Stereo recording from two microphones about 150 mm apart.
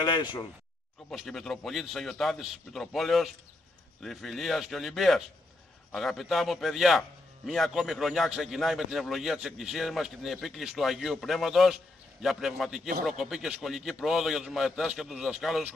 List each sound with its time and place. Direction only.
0.0 s speech: 30° left (ahead or behind)
1.1 s a man's voice: centre (ahead or behind)